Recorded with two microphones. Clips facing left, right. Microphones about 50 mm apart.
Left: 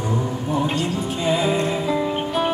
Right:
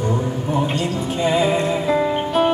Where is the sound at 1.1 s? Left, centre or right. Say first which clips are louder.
Right 3 dB; right.